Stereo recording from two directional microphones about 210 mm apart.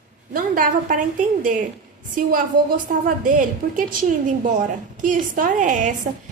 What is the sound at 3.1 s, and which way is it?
A woman's voice, 40° right (ahead or behind).